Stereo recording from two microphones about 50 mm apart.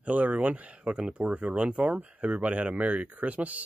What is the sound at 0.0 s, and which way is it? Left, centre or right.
Speech, right.